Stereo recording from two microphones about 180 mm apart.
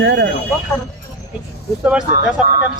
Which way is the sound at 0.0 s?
85° right.